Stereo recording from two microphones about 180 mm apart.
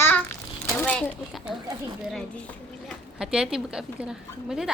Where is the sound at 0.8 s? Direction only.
5° left (ahead or behind).